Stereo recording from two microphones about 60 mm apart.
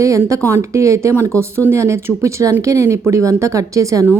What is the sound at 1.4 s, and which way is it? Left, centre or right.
A woman's voice, right.